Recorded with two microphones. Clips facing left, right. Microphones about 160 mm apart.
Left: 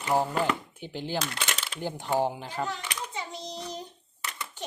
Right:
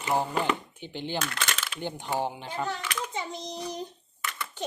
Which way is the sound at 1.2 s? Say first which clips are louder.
Right 1 dB; 15° left (ahead or behind).